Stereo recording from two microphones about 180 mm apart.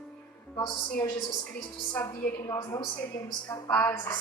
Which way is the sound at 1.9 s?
15° left (ahead or behind).